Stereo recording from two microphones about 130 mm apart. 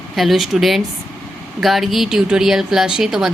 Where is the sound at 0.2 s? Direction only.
Centre (ahead or behind).